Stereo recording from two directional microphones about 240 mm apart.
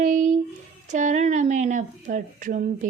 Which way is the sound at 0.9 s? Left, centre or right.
Right.